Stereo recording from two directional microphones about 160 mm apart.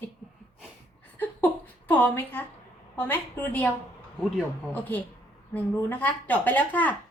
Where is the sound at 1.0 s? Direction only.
10° left (ahead or behind).